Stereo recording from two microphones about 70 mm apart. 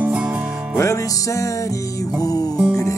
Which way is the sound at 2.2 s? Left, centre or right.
Left.